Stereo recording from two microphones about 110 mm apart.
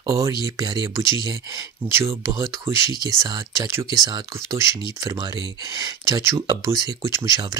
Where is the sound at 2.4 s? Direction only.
40° right (ahead or behind).